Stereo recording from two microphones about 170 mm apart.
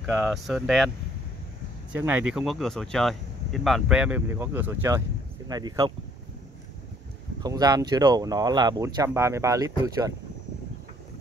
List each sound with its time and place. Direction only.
0.0 s speech: centre (ahead or behind)
2.0 s speech: 10° right (ahead or behind)
7.3 s speech: 25° right (ahead or behind)